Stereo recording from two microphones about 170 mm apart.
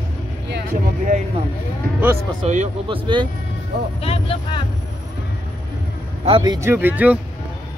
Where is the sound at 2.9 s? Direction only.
30° right (ahead or behind).